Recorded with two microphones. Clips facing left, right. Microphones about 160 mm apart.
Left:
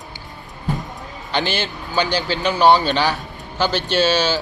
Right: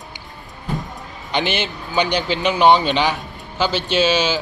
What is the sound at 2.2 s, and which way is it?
A man's voice, 20° right (ahead or behind).